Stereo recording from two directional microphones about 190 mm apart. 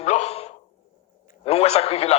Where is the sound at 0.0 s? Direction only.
35° left (ahead or behind).